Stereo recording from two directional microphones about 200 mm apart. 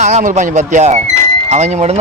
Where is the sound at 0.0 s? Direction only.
35° right (ahead or behind).